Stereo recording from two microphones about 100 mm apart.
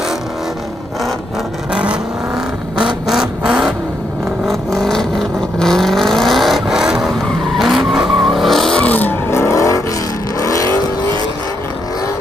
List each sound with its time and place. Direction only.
1.7 s vehicle: 10° right (ahead or behind)
3.1 s vehicle: 5° right (ahead or behind)
4.5 s vehicle: 5° left (ahead or behind)
9.3 s vehicle: 25° left (ahead or behind)